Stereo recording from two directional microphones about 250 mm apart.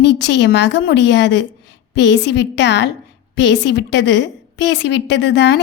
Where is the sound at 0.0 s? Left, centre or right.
Left.